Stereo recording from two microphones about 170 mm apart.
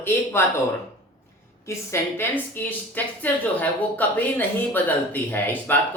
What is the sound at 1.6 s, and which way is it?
A woman's voice, 15° left (ahead or behind).